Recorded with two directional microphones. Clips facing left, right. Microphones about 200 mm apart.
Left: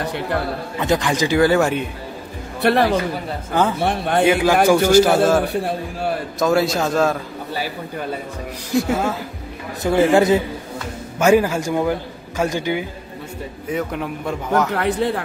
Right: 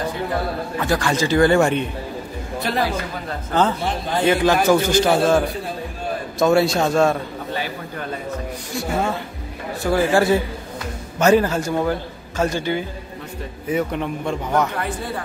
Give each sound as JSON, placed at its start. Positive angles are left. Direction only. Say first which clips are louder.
{"t": 0.0, "sound": "a sound", "louder": "left 1 dB", "side_deg": 70}
{"t": 0.7, "sound": "a man's voice", "louder": "left 2 dB", "side_deg": 20}
{"t": 2.6, "sound": "speech", "louder": "left 8 dB", "side_deg": 65}
{"t": 3.8, "sound": "speech", "louder": "left 4 dB", "side_deg": 65}
{"t": 4.2, "sound": "a man's voice", "louder": "left 2 dB", "side_deg": 10}
{"t": 5.4, "sound": "speech", "louder": "left 4 dB", "side_deg": 70}
{"t": 6.4, "sound": "a man's voice", "louder": "right 2 dB", "side_deg": 0}
{"t": 8.7, "sound": "a man's voice", "louder": "left 4 dB", "side_deg": 0}
{"t": 9.8, "sound": "a man's voice", "louder": "left 3 dB", "side_deg": 20}
{"t": 13.7, "sound": "a man's voice", "louder": "right 2 dB", "side_deg": 0}
{"t": 14.8, "sound": "speech", "louder": "left 7 dB", "side_deg": 70}